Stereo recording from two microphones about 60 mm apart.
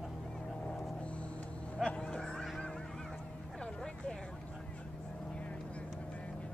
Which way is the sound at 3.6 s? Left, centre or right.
Centre.